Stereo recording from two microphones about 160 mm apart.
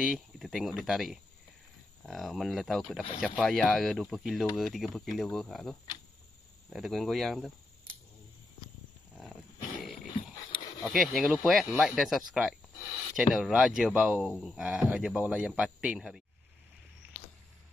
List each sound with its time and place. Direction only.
0.0 s speech: centre (ahead or behind)
10.8 s speech: centre (ahead or behind)